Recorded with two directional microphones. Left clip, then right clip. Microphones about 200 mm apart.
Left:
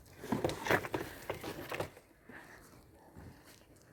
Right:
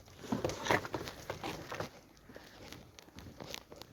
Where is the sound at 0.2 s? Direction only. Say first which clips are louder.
Left 1 dB; 30° left (ahead or behind).